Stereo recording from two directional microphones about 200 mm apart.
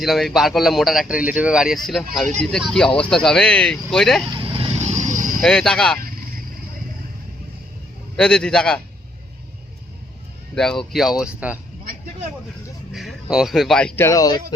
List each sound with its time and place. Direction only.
0.0 s speech: centre (ahead or behind)
4.3 s vehicle: 25° right (ahead or behind); by 5.4 s 40° right (ahead or behind)
5.4 s speech: 5° left (ahead or behind)
8.1 s speech: 5° left (ahead or behind)
10.5 s speech: 5° left (ahead or behind)
12.9 s a sound: centre (ahead or behind)
13.3 s speech: centre (ahead or behind); by 14.3 s 15° left (ahead or behind)